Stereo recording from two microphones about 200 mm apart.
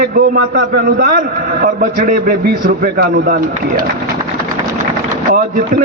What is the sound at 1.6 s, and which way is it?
A man's voice, 45° right (ahead or behind).